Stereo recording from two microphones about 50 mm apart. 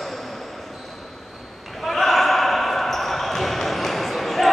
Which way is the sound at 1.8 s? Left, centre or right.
Centre.